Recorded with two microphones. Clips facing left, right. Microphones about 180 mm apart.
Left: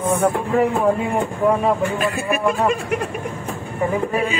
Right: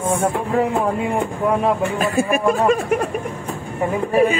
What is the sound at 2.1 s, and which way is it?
Speech, 40° right (ahead or behind).